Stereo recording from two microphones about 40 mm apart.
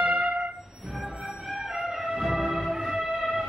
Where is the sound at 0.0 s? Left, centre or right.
Right.